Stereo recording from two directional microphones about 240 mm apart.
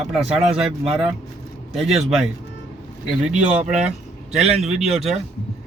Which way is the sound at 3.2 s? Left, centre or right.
Centre.